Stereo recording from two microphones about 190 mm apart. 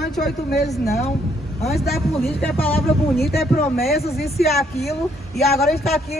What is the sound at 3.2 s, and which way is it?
Speech, 55° left (ahead or behind).